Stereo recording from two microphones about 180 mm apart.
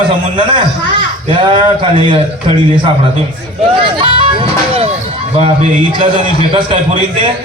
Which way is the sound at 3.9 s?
30° right (ahead or behind).